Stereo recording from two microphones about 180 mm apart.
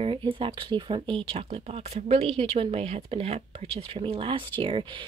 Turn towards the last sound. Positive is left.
turn(degrees=-30)  # may be behind; listen again after turning